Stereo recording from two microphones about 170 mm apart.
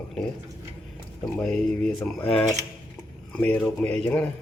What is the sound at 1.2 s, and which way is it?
Speech, 5° left (ahead or behind).